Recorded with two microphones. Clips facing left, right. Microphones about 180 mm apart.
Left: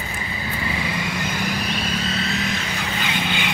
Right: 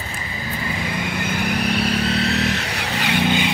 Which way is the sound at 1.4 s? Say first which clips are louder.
Right 4 dB; 65° right (ahead or behind).